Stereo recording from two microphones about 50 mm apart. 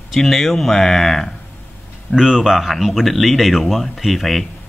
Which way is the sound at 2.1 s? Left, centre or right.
Centre.